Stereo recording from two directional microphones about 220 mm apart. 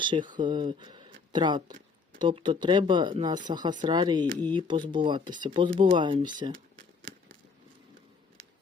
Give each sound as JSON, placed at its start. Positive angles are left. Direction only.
{"t": 0.0, "sound": "speech", "side_deg": -20}